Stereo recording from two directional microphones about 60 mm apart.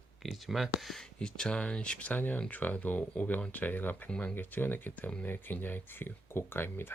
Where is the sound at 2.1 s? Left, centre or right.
Left.